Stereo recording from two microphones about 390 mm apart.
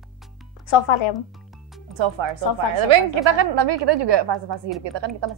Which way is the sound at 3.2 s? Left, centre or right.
Right.